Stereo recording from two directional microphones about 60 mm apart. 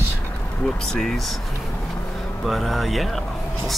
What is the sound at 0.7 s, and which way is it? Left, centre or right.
Speech, centre.